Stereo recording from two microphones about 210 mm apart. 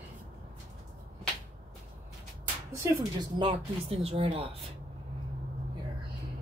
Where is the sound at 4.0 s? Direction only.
30° right (ahead or behind).